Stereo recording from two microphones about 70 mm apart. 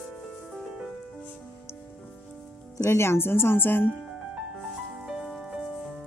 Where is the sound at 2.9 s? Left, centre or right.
Left.